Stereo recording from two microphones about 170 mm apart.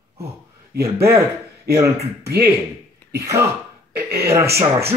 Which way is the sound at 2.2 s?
15° right (ahead or behind).